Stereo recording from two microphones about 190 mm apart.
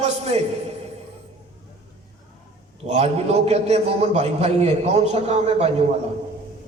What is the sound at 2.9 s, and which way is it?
A man's voice, 35° right (ahead or behind).